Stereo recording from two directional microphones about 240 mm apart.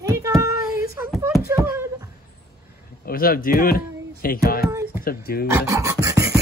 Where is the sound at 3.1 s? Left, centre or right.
Left.